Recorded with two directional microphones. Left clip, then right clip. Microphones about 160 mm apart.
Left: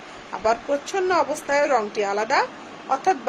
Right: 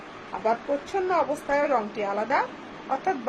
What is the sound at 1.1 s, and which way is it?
A child's voice, 65° left (ahead or behind).